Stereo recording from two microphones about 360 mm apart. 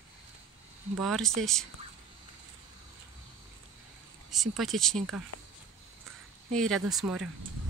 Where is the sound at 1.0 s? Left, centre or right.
Centre.